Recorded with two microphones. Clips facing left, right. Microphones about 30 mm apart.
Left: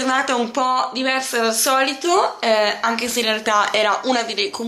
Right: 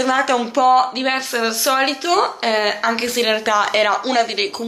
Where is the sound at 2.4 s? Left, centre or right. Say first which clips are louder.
Even; centre.